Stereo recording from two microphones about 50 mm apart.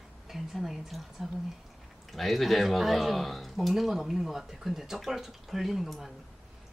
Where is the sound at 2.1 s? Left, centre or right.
Centre.